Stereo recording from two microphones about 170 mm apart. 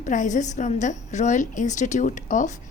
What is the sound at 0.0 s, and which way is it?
A woman's voice, 45° left (ahead or behind).